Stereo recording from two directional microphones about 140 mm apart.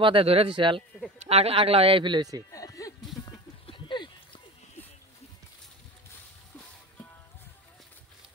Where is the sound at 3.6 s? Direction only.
35° left (ahead or behind).